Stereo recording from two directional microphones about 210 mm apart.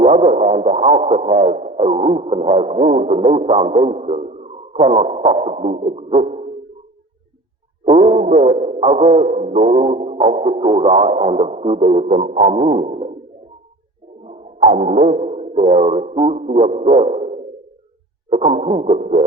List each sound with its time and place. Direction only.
0.0 s music: 30° right (ahead or behind)
3.8 s speech: 30° right (ahead or behind)
7.9 s music: 30° right (ahead or behind)
14.3 s music: 30° right (ahead or behind)